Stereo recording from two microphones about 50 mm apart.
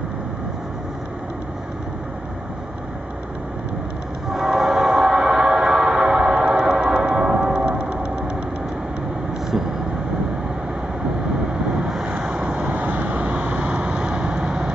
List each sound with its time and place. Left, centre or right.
4.3 s train: centre; by 8.3 s right
11.9 s vehicle: centre
12.7 s vehicle: right; by 14.7 s centre